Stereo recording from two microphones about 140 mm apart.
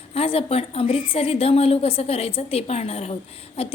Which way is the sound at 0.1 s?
45° left (ahead or behind).